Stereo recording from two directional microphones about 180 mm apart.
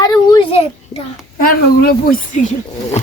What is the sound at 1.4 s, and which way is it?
A woman's voice, 50° left (ahead or behind).